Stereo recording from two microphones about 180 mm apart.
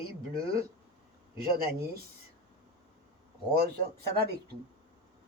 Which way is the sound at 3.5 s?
60° right (ahead or behind).